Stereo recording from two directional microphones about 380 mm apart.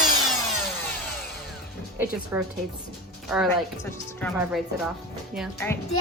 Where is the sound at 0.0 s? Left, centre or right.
Centre.